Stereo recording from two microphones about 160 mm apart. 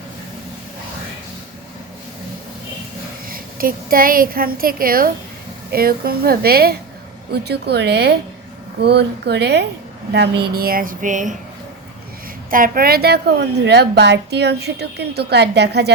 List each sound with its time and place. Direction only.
3.2 s a woman's voice: 65° right (ahead or behind)
7.3 s a woman's voice: 90° right; by 11.3 s 55° right (ahead or behind)
12.5 s a woman's voice: 60° right (ahead or behind); by 15.9 s 90° right